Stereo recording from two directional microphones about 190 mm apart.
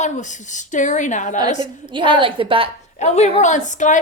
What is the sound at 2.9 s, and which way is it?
A woman's voice, 35° left (ahead or behind).